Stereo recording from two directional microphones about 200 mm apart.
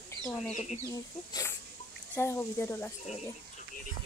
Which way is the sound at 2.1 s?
10° left (ahead or behind).